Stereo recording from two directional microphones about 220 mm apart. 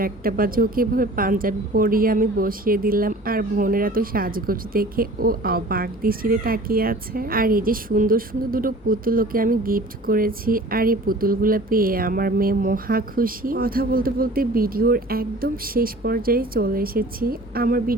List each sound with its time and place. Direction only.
0.0 s speech: 40° right (ahead or behind)